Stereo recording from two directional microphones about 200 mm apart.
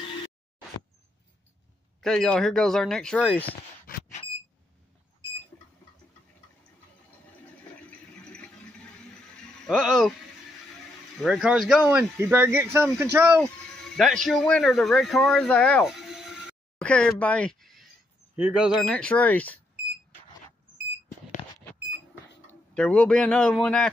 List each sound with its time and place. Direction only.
2.0 s speech: centre (ahead or behind)
3.8 s a sound: 45° left (ahead or behind)
8.2 s a sound: 5° left (ahead or behind)
11.1 s speech: centre (ahead or behind)
13.9 s a man's voice: centre (ahead or behind)
22.8 s speech: 5° left (ahead or behind)